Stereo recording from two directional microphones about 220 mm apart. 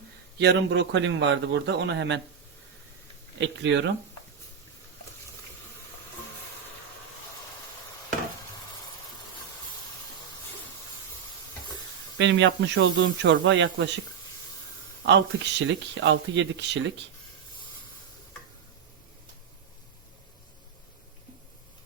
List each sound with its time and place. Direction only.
0.3 s a man's voice: 50° right (ahead or behind)
3.3 s a man's voice: 55° right (ahead or behind)
12.1 s a man's voice: 55° right (ahead or behind)
15.0 s a man's voice: 55° right (ahead or behind)